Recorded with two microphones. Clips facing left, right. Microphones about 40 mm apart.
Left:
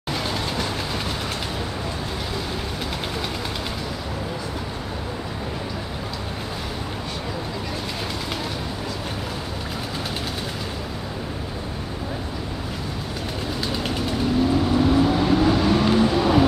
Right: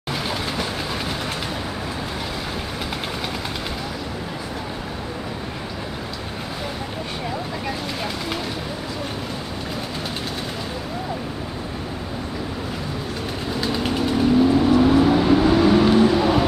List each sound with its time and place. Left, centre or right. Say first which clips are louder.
13.6 s vehicle: right 5 dB; centre